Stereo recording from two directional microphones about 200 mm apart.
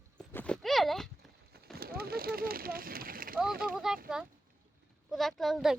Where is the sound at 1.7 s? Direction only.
50° right (ahead or behind).